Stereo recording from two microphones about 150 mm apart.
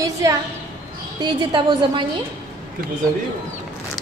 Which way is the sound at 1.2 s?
30° right (ahead or behind).